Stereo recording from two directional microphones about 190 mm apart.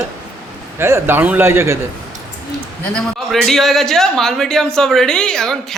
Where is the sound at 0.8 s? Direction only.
15° right (ahead or behind).